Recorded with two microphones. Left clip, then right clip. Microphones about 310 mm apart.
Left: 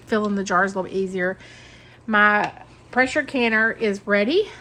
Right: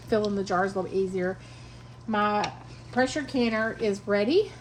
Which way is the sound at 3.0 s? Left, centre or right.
Left.